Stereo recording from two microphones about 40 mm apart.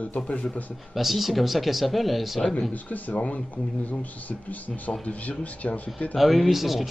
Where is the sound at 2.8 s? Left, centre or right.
Left.